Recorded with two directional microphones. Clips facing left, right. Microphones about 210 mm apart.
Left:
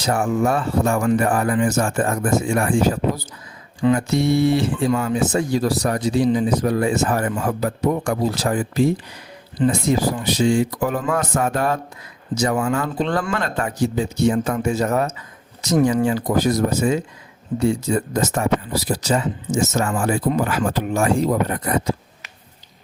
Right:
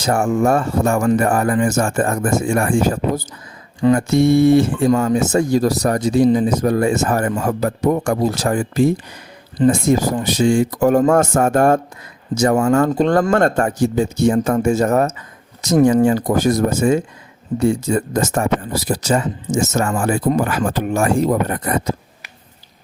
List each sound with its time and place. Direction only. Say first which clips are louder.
0.0 s speech: right 3 dB; 45° right (ahead or behind)